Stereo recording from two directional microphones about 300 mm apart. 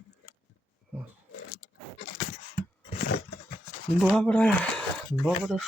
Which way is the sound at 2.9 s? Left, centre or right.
Left.